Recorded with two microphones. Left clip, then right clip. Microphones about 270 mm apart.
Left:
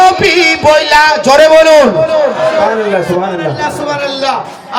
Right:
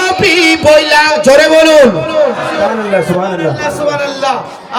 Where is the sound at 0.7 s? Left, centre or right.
Right.